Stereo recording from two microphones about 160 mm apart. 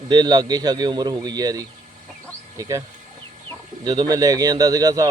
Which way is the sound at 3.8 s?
25° right (ahead or behind).